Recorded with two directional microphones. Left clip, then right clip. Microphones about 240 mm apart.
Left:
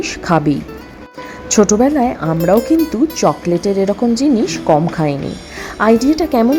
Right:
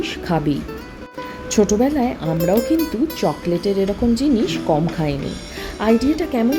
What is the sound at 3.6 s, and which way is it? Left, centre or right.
Speech, centre.